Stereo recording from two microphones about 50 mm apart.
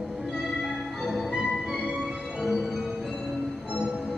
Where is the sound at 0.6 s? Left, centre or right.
Centre.